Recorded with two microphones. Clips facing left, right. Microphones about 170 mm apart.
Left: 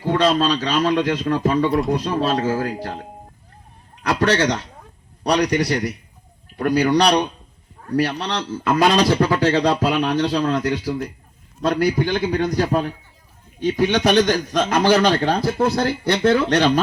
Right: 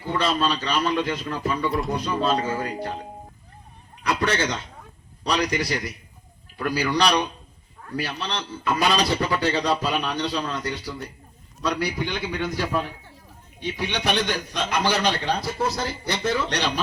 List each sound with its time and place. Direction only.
0.1 s a man's voice: 80° left
4.0 s a man's voice: 80° left
5.2 s a man's voice: 65° left (ahead or behind)
7.9 s speech: 75° left (ahead or behind)
11.6 s a man's voice: 50° left (ahead or behind)